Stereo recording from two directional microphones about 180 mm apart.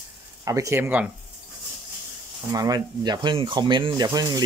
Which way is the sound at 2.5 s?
20° right (ahead or behind).